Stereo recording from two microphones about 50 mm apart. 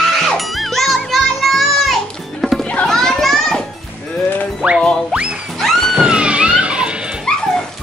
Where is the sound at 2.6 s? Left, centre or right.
Left.